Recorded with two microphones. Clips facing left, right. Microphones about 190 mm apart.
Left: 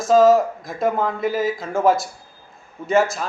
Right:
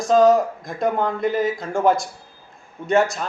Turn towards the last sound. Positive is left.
turn(degrees=0)  # may be behind; listen again after turning